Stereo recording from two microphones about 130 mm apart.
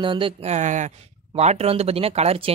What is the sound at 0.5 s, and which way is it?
Speech, 70° right (ahead or behind).